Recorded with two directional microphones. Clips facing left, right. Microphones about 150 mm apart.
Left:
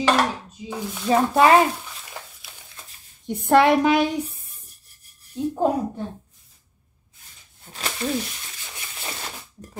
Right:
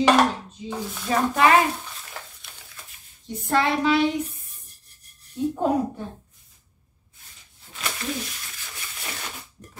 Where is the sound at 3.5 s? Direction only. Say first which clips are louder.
Left 5 dB; 60° left (ahead or behind).